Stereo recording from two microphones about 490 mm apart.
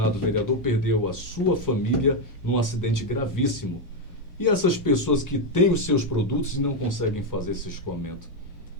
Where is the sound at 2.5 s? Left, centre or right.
Left.